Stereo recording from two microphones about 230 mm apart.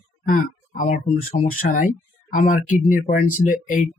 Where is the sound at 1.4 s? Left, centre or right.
Left.